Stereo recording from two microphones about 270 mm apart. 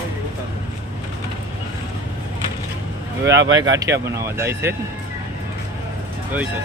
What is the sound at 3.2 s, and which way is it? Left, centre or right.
Speech, right.